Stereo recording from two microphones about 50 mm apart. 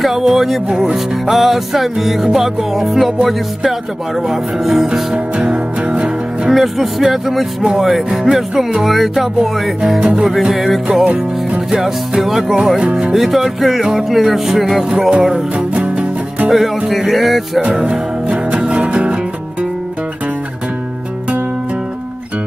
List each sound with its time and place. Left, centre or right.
0.0 s music: centre
0.7 s speech: centre
0.9 s music: centre
4.3 s speech: centre
5.1 s music: right
6.5 s speech: centre
9.8 s speech: centre
10.5 s music: centre
11.7 s speech: centre
13.1 s music: centre
14.9 s speech: centre
15.3 s music: right
16.4 s music: centre
17.8 s music: right